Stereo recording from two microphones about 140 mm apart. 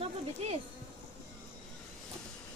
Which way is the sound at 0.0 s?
45° right (ahead or behind).